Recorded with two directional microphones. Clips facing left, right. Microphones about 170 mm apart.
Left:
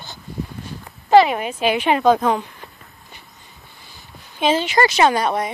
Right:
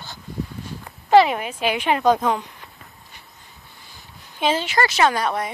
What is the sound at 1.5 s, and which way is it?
Speech, 10° right (ahead or behind).